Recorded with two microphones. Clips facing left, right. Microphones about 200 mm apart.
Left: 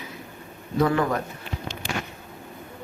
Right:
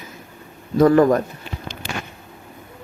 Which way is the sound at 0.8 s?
45° right (ahead or behind).